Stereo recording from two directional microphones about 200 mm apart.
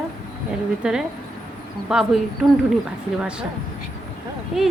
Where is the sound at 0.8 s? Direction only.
5° right (ahead or behind).